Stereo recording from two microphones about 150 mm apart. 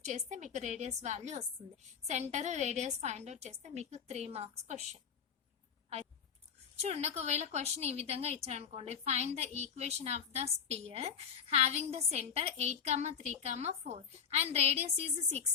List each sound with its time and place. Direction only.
0.0 s a woman's voice: 50° right (ahead or behind)
6.8 s a woman's voice: 45° right (ahead or behind)